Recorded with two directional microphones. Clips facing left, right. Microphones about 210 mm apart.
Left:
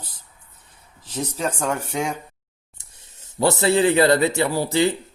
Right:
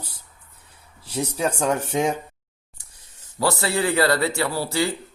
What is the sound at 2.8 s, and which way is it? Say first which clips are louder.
Speech: left 2 dB; 25° left (ahead or behind).